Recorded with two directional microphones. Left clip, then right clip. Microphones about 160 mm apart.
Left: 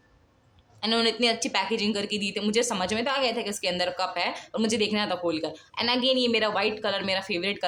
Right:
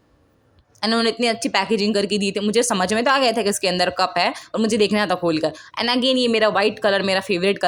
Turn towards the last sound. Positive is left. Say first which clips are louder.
# right 9 dB
turn(degrees=-35)  # may be behind; listen again after turning